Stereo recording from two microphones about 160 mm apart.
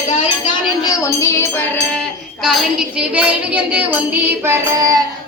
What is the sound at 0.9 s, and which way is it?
Music, 20° left (ahead or behind).